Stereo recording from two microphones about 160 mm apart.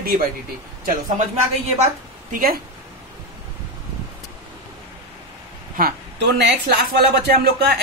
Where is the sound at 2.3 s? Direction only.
65° right (ahead or behind).